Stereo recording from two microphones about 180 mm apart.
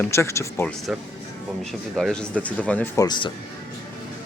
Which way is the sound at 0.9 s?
5° right (ahead or behind).